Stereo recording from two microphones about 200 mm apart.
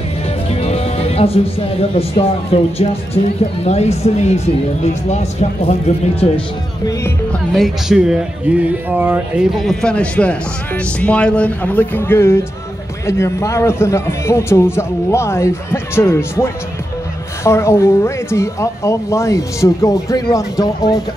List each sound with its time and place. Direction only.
0.5 s speech: 30° left (ahead or behind)
7.5 s speech: centre (ahead or behind); by 21.0 s 20° left (ahead or behind)